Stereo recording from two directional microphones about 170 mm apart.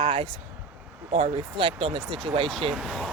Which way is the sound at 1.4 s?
30° right (ahead or behind).